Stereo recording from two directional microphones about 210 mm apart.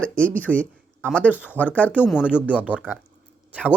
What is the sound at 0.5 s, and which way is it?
Speech, 5° right (ahead or behind).